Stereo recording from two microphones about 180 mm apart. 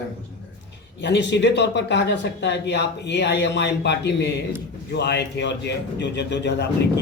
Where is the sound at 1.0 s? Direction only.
75° left (ahead or behind).